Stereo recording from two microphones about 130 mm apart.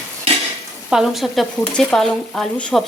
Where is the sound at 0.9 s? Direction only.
Centre (ahead or behind).